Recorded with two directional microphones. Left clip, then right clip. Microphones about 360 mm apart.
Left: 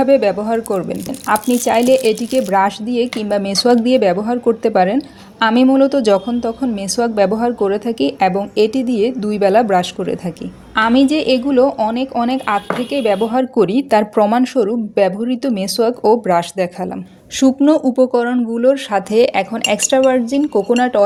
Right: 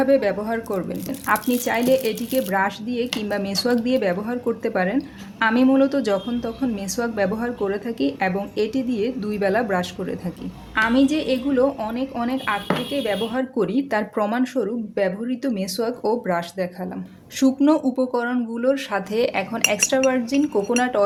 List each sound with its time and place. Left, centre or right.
0.0 s speech: right